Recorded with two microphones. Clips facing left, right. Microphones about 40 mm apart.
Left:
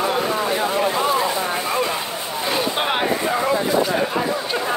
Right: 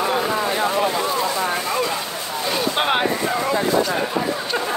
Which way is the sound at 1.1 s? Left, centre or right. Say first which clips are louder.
Left 1 dB; left.